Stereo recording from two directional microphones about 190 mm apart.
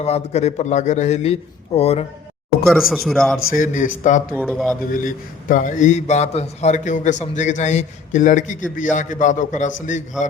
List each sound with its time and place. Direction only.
0.0 s a man's voice: 35° left (ahead or behind)
2.6 s speech: centre (ahead or behind)
3.5 s a man's voice: 45° left (ahead or behind)
4.4 s speech: 5° left (ahead or behind)
4.9 s a man's voice: 45° left (ahead or behind)